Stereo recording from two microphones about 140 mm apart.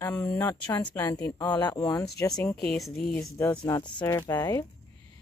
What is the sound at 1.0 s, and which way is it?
Speech, 25° left (ahead or behind).